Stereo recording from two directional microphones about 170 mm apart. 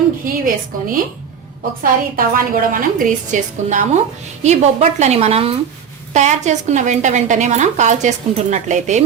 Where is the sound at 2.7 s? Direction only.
50° right (ahead or behind).